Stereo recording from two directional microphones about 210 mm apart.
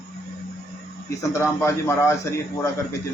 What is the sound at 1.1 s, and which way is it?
A man's voice, 15° left (ahead or behind).